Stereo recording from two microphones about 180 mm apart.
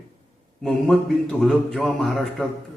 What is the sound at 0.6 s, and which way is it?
Speech, centre (ahead or behind).